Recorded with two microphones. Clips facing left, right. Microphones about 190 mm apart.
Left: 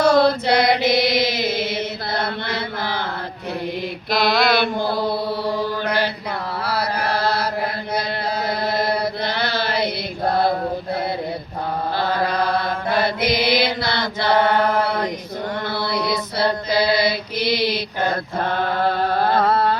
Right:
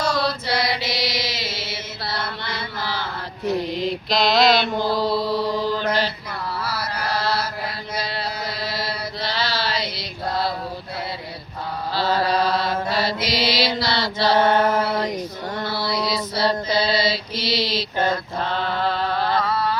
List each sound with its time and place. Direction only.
0.0 s chant: 55° left (ahead or behind)
3.8 s mantra: 55° left (ahead or behind)
11.9 s mantra: 55° left (ahead or behind)
15.7 s music: 55° left (ahead or behind)
16.9 s mantra: 60° left (ahead or behind)
18.1 s a sound: 50° left (ahead or behind)